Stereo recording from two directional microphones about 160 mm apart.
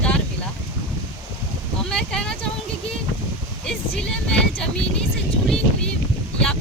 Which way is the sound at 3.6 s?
5° left (ahead or behind).